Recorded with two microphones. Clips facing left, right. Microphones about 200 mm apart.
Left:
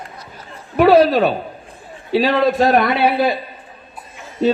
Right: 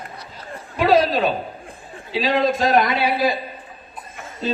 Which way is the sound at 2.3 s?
60° left (ahead or behind).